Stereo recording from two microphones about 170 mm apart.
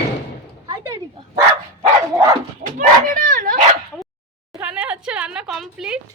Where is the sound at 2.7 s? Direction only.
55° right (ahead or behind).